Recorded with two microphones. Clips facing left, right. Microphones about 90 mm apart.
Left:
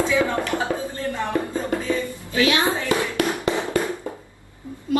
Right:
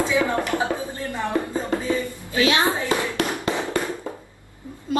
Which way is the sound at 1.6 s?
20° right (ahead or behind).